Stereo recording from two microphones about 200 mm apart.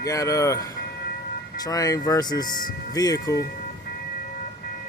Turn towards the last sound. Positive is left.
turn(degrees=20)  # may be behind; listen again after turning